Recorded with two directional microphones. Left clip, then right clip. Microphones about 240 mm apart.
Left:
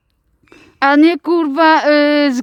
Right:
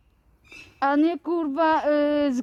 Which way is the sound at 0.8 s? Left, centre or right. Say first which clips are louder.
Left 11 dB; left.